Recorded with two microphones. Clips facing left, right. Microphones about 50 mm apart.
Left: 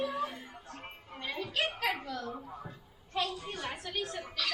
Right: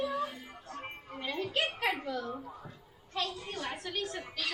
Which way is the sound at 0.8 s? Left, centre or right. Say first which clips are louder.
Right 2 dB; centre.